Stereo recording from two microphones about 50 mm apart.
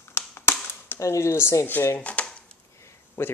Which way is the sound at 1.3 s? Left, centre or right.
Left.